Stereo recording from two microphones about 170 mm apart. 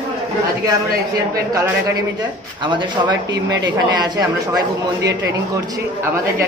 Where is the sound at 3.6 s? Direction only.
25° right (ahead or behind).